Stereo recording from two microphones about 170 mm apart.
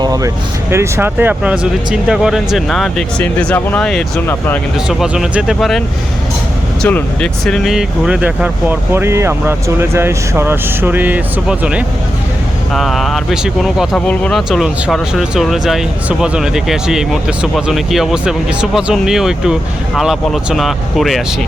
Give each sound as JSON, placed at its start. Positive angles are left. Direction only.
{"t": 0.0, "sound": "vehicle", "side_deg": -20}
{"t": 0.7, "sound": "speech", "side_deg": -15}
{"t": 4.9, "sound": "speech", "side_deg": -5}
{"t": 6.8, "sound": "speech", "side_deg": 5}